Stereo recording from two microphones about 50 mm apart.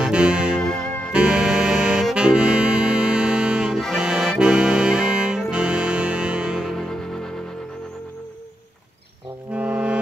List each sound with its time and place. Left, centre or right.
0.0 s music: centre
0.6 s music: centre
1.1 s music: centre
3.9 s accordion: centre
5.5 s music: centre
6.7 s music: centre
9.5 s music: right